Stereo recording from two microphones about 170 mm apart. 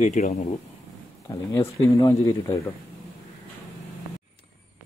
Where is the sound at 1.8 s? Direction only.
20° left (ahead or behind).